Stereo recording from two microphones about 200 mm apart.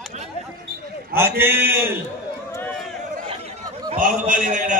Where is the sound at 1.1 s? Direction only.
10° right (ahead or behind).